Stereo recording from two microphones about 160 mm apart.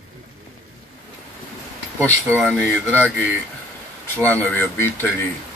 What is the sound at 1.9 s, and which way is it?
Speech, 15° right (ahead or behind).